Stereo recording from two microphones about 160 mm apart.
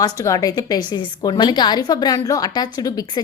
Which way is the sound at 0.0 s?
20° left (ahead or behind).